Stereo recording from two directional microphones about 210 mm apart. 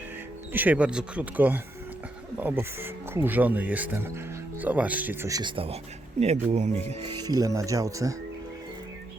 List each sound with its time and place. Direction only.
0.5 s speech: 10° right (ahead or behind); by 6.7 s 30° right (ahead or behind)
6.8 s speech: 20° right (ahead or behind)